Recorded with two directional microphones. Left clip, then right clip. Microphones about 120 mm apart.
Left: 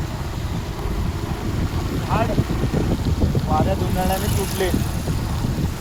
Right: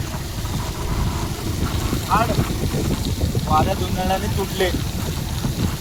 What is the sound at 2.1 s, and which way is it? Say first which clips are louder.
Speech: right 4 dB; 35° right (ahead or behind).